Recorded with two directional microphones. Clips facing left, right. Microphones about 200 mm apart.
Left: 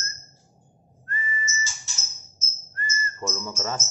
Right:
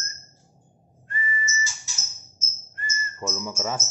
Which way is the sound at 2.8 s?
5° right (ahead or behind).